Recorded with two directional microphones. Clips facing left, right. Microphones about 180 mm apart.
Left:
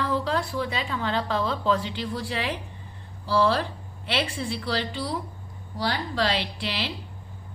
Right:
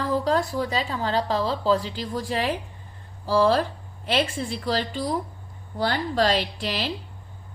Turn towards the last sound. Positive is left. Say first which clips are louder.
# right 3 dB
turn(degrees=-45)  # may be behind; listen again after turning